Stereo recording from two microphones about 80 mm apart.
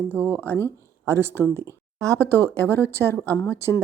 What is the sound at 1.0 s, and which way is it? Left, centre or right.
Speech, right.